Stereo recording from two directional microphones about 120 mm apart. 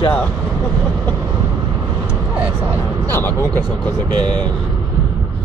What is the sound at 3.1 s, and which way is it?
Speech, 20° left (ahead or behind).